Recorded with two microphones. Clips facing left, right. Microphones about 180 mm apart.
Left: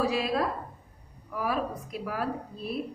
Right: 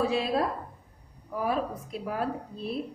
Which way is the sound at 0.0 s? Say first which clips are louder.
Right 1 dB; 30° right (ahead or behind).